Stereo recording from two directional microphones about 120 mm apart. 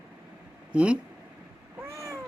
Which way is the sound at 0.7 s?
10° right (ahead or behind).